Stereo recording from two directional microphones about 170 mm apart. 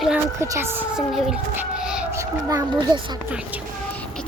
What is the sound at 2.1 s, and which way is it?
A child's voice, 20° right (ahead or behind).